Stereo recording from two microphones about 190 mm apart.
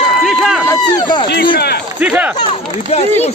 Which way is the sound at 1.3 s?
55° left (ahead or behind).